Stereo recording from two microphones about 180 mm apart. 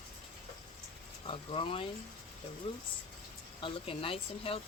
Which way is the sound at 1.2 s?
30° left (ahead or behind).